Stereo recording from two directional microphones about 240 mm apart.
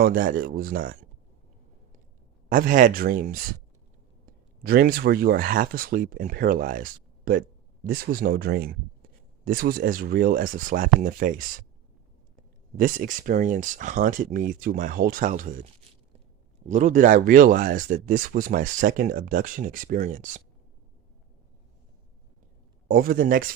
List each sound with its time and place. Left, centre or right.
0.0 s speech: right
2.5 s speech: right
12.7 s speech: right
16.6 s speech: right
22.9 s speech: right